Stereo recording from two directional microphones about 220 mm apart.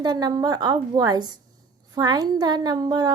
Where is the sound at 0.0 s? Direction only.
20° right (ahead or behind).